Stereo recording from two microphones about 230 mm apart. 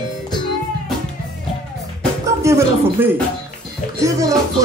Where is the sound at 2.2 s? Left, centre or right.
Centre.